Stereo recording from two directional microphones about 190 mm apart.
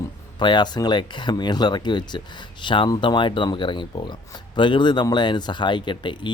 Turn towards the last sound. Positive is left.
turn(degrees=25)  # may be behind; listen again after turning